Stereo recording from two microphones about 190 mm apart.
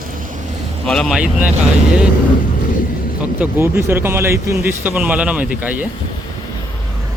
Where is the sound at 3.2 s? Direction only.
10° right (ahead or behind).